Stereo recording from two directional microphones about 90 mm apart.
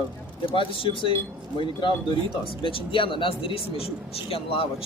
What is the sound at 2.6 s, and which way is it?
Speech, 80° left.